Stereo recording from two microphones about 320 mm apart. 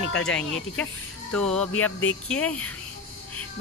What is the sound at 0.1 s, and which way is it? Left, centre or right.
Speech, centre.